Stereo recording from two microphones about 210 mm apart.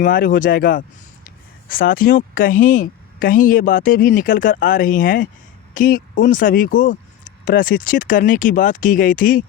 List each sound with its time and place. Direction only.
0.0 s speech: 40° left (ahead or behind)